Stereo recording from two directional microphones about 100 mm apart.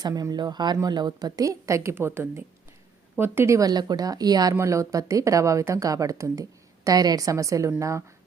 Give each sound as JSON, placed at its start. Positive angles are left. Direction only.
{"t": 0.0, "sound": "a woman's voice", "side_deg": -40}